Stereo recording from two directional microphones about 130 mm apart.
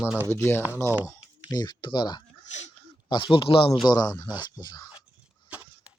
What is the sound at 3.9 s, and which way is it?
Speech, 30° left (ahead or behind).